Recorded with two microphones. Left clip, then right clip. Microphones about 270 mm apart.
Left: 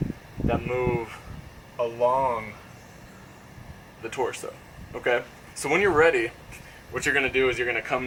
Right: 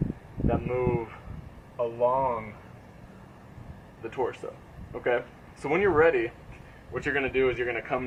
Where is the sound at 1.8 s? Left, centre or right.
Right.